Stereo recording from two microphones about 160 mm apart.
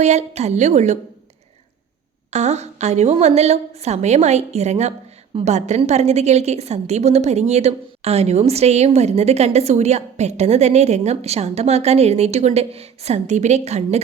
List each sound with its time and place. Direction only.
0.0 s a woman's voice: 45° right (ahead or behind)
2.3 s a woman's voice: 45° right (ahead or behind)